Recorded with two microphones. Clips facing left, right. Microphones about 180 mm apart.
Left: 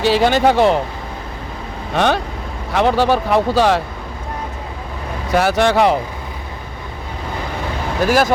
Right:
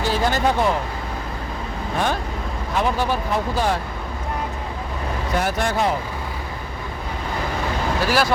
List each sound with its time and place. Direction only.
0.0 s speech: 80° left
2.0 s speech: 80° left
5.3 s speech: 85° left
8.0 s speech: 45° left (ahead or behind)